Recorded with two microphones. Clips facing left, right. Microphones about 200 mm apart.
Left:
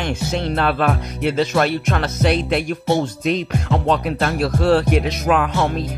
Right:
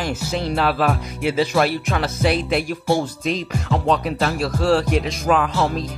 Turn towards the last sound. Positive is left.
turn(degrees=0)  # may be behind; listen again after turning